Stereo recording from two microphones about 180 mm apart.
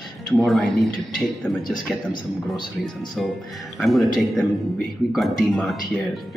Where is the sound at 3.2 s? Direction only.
Centre (ahead or behind).